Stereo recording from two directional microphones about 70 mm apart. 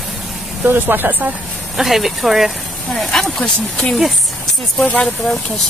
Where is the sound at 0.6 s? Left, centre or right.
Right.